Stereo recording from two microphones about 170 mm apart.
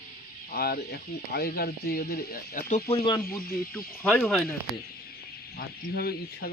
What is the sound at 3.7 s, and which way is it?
Speech, 10° left (ahead or behind).